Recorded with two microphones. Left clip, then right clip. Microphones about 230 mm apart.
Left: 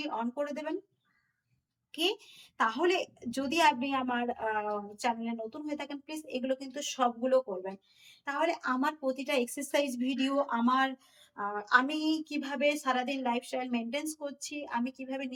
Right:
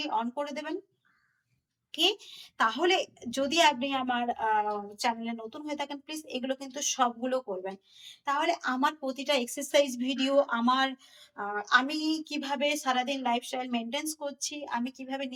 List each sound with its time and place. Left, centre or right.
0.0 s a woman's voice: centre
1.9 s a woman's voice: centre